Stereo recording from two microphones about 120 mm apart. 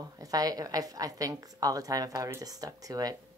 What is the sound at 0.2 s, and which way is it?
A woman's voice, 30° right (ahead or behind).